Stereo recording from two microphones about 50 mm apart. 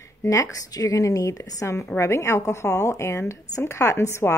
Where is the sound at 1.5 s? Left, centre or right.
Left.